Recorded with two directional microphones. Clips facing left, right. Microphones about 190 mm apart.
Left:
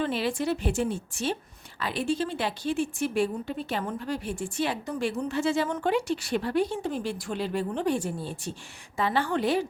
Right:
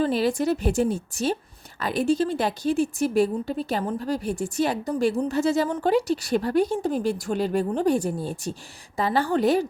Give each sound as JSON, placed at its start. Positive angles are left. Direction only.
{"t": 0.0, "sound": "a woman's voice", "side_deg": -40}